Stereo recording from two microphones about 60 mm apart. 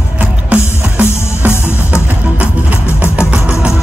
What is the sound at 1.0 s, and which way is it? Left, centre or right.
Music, right.